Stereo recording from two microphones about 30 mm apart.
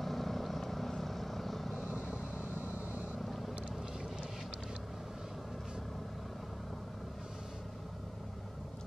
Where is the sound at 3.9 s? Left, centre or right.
Right.